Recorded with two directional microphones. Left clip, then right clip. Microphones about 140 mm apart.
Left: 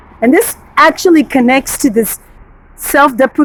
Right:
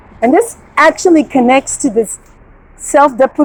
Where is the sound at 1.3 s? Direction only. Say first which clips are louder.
Right 1 dB; 50° left (ahead or behind).